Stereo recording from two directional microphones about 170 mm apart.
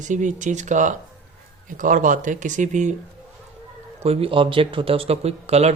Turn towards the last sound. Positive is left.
turn(degrees=-40)  # may be behind; listen again after turning